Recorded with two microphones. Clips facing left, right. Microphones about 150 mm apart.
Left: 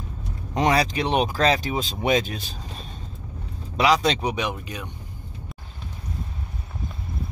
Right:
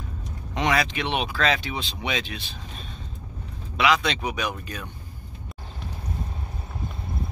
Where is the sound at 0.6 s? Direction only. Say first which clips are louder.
Left 3 dB; 35° left (ahead or behind).